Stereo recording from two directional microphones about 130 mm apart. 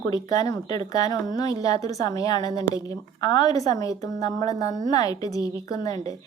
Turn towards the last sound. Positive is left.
turn(degrees=30)  # may be behind; listen again after turning